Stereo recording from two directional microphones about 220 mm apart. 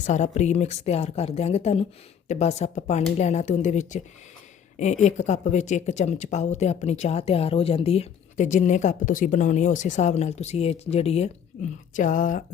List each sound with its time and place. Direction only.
0.0 s speech: 30° left (ahead or behind)